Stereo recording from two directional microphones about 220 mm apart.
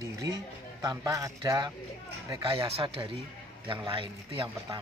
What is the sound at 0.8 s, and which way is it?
A man's voice, 15° right (ahead or behind).